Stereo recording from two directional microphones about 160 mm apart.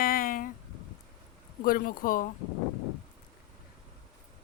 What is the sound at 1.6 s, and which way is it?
Speech, 65° left (ahead or behind).